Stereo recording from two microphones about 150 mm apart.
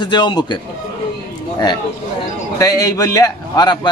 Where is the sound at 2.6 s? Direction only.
25° left (ahead or behind).